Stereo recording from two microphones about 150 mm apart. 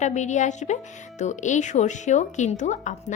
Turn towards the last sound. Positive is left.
turn(degrees=55)  # may be behind; listen again after turning